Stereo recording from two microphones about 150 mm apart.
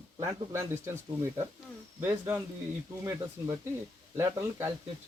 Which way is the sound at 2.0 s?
15° right (ahead or behind).